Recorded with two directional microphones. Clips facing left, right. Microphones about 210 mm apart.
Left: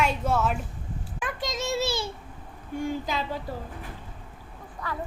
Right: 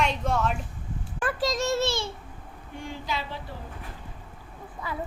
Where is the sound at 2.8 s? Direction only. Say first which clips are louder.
Left 3 dB; 45° left (ahead or behind).